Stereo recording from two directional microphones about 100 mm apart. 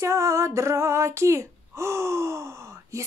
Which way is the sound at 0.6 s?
30° right (ahead or behind).